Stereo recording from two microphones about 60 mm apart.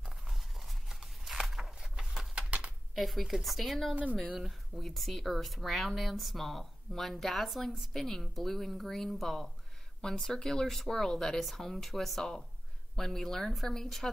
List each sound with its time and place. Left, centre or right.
0.0 s a sound: centre
2.3 s bird: right
2.9 s speech: centre
3.9 s speech: right
4.4 s speech: centre